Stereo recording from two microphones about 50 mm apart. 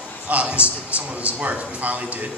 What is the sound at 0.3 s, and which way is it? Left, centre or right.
A man's voice, right.